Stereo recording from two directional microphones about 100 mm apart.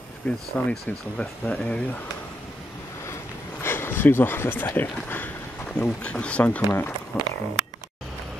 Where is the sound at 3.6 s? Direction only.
25° left (ahead or behind).